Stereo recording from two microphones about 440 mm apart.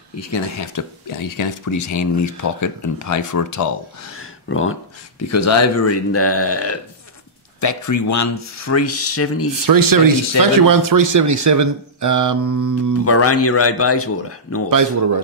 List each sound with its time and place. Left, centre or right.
0.2 s speech: left
4.2 s speech: left
9.7 s speech: right
13.0 s speech: left